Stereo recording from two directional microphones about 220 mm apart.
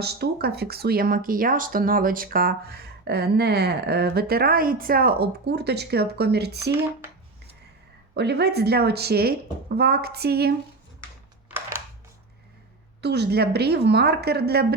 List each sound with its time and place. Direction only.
0.0 s speech: 45° right (ahead or behind)
8.1 s speech: 50° right (ahead or behind)
11.4 s a sound: 10° right (ahead or behind)
13.0 s speech: 50° right (ahead or behind)